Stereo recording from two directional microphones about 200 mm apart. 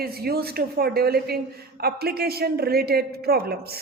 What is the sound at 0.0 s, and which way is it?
A woman's voice, 50° right (ahead or behind).